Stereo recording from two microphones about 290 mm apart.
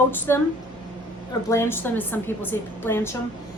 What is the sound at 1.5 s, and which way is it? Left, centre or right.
A woman's voice, centre.